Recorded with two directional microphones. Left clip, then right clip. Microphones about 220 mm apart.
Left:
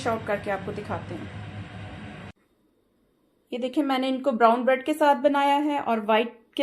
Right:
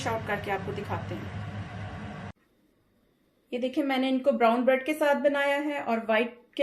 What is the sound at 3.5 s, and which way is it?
A woman's voice, 45° left (ahead or behind).